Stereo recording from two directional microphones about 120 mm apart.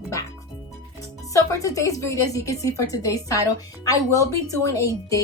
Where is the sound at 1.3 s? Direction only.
25° left (ahead or behind).